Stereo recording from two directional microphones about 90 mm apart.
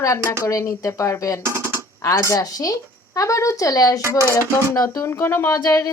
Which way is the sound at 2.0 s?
35° left (ahead or behind).